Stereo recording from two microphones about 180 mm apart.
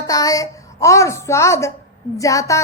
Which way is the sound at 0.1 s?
20° left (ahead or behind).